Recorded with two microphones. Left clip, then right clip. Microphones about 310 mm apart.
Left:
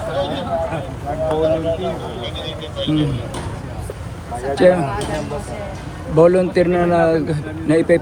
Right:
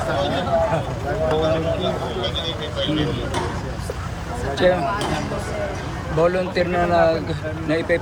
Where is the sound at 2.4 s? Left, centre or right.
Left.